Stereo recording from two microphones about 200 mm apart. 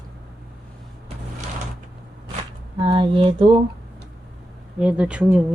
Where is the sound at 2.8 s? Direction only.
25° right (ahead or behind).